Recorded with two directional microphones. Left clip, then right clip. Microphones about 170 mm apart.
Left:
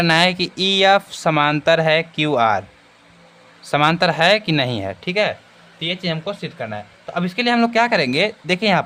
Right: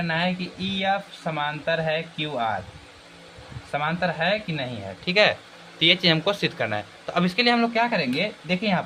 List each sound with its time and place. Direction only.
0.0 s speech: 80° left
3.7 s speech: 70° left (ahead or behind)
5.0 s speech: 20° left (ahead or behind)
5.8 s speech: centre (ahead or behind)
7.1 s speech: 15° left (ahead or behind)
7.3 s speech: 30° left (ahead or behind); by 8.8 s 60° left (ahead or behind)